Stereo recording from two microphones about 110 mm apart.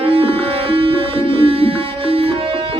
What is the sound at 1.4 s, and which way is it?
Music, 55° right (ahead or behind).